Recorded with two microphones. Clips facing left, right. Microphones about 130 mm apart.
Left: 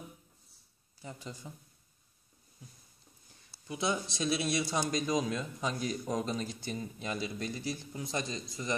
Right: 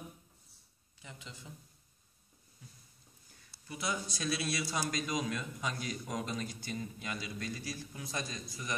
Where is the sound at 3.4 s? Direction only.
25° left (ahead or behind).